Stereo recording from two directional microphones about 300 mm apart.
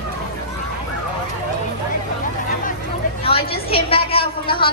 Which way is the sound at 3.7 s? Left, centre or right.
Centre.